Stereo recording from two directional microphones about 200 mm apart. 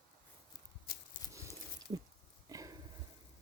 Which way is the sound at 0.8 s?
45° left (ahead or behind).